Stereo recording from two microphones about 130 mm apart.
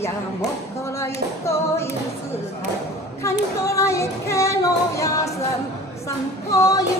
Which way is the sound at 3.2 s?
25° left (ahead or behind).